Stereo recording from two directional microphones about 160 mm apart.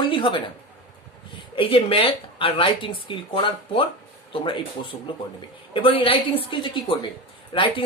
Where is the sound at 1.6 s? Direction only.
35° left (ahead or behind).